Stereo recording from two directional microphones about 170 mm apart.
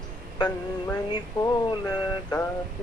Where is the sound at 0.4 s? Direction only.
25° left (ahead or behind).